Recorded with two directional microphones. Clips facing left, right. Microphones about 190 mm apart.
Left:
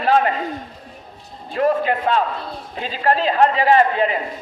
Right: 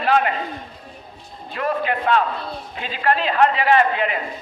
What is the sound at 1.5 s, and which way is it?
A man's voice, 35° left (ahead or behind).